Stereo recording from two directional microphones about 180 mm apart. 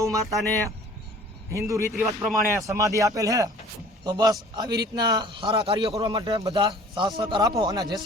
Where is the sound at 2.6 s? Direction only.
15° right (ahead or behind).